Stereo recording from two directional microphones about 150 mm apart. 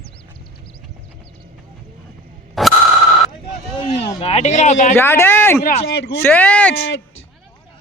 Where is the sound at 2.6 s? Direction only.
Centre (ahead or behind).